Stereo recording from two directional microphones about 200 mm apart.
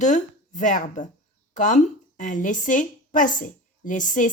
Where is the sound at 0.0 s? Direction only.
40° left (ahead or behind).